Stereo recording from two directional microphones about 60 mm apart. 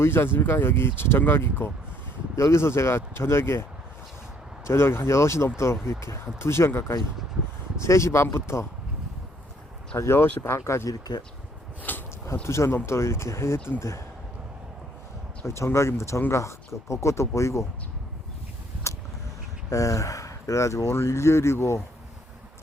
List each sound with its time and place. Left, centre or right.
0.0 s speech: left
9.9 s speech: left
11.8 s a sound: left
12.4 s speech: left
15.4 s speech: left
18.8 s a sound: left
19.7 s speech: left